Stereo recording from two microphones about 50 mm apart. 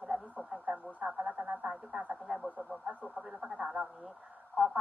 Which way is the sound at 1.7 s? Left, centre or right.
Centre.